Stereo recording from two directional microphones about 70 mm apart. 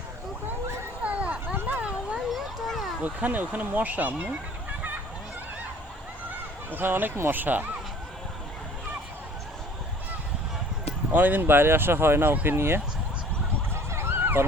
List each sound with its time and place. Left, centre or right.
1.0 s vehicle: centre
2.3 s a sound: centre
3.0 s speech: right
6.7 s speech: right
11.1 s speech: right
13.9 s dog: right